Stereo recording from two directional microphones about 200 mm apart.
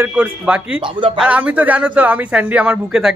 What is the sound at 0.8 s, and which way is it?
Speech, 25° right (ahead or behind).